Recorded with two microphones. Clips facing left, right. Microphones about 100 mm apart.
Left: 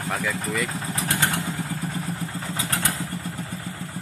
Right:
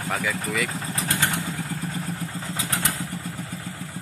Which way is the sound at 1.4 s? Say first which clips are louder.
Left 1 dB; 15° left (ahead or behind).